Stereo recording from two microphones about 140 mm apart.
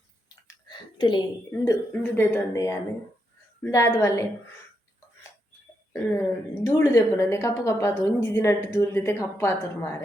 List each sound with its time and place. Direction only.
0.4 s a sound: 30° left (ahead or behind)
1.5 s a woman's voice: 15° left (ahead or behind)
5.9 s a woman's voice: 20° left (ahead or behind)